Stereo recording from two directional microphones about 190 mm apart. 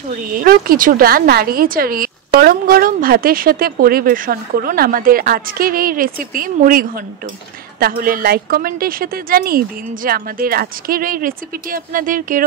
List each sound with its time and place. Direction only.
0.1 s a woman's voice: 45° right (ahead or behind)